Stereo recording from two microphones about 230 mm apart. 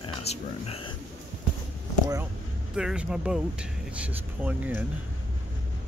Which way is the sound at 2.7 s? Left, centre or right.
Centre.